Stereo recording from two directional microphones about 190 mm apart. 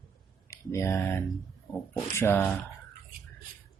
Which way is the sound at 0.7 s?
15° left (ahead or behind).